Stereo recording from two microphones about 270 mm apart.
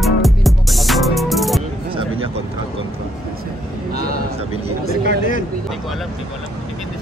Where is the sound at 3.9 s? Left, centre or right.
Right.